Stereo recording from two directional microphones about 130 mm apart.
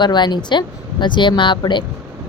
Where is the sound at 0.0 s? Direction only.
35° left (ahead or behind).